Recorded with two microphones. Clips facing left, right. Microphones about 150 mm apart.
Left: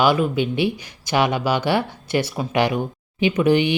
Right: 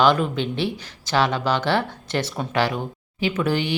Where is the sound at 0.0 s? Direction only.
10° left (ahead or behind).